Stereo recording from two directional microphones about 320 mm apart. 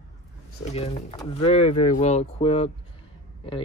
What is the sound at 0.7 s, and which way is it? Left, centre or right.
Speech, centre.